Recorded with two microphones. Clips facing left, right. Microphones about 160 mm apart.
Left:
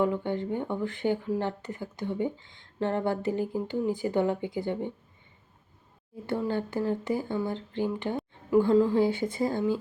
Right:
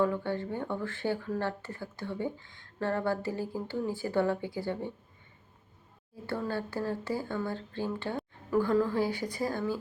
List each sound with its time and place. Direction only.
0.0 s speech: 20° left (ahead or behind)
6.2 s speech: 20° left (ahead or behind)